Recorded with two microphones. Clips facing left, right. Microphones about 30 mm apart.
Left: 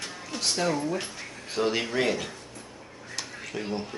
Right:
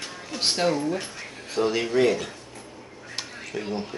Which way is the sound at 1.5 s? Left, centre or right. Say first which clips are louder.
Right 3 dB; centre.